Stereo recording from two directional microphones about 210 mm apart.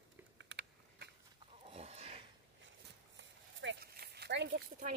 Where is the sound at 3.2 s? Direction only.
60° right (ahead or behind).